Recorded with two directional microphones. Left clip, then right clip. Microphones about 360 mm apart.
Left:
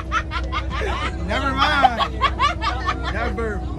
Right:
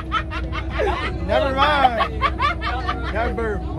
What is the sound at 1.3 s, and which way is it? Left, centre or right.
Hubbub, centre.